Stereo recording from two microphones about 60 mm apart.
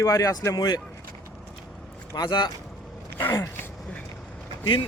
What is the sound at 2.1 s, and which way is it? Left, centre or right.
Speech, left.